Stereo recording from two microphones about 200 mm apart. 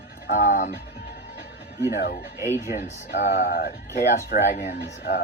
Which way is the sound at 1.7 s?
55° left (ahead or behind).